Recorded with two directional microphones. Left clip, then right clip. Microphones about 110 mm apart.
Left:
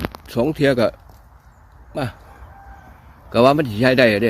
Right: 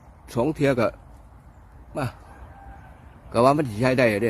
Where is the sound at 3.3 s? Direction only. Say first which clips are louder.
Left 5 dB; 25° left (ahead or behind).